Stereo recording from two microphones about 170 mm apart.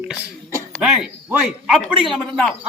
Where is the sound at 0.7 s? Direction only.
5° right (ahead or behind).